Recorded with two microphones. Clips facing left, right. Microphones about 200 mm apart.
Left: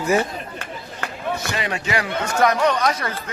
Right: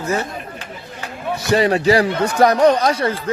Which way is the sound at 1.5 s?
35° right (ahead or behind).